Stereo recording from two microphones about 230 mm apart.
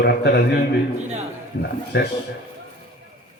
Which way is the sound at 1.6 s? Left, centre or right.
Left.